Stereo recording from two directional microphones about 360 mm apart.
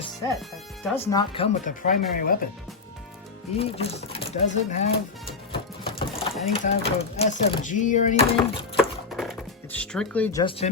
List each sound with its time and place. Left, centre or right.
0.9 s speech: centre; by 2.4 s left
3.6 s speech: centre
5.5 s sewing machine: centre
6.4 s speech: centre
8.8 s music: centre